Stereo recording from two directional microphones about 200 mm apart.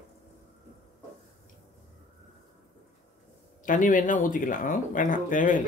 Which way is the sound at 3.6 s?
40° left (ahead or behind).